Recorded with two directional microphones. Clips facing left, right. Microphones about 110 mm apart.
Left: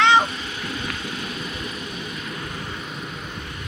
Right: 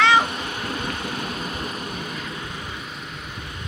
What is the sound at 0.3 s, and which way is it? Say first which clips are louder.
Vehicle: right 2 dB; 55° right (ahead or behind).